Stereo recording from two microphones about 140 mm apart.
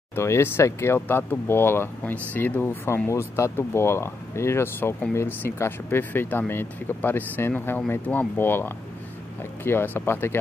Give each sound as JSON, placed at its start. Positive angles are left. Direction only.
{"t": 0.1, "sound": "speech", "side_deg": 20}